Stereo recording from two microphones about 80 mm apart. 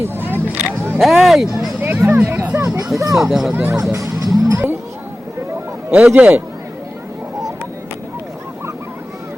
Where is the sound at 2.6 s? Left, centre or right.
Right.